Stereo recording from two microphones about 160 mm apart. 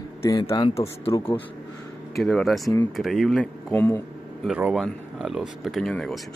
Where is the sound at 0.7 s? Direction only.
40° left (ahead or behind).